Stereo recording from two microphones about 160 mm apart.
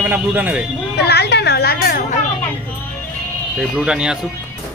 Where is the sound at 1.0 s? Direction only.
90° left; by 2.0 s 70° left (ahead or behind).